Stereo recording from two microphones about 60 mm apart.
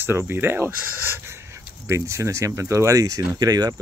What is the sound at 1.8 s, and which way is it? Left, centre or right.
Speech, right.